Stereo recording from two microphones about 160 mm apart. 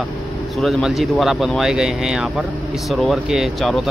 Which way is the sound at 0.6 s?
Centre (ahead or behind).